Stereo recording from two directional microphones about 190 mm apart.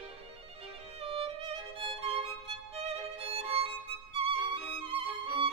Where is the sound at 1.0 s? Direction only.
30° right (ahead or behind).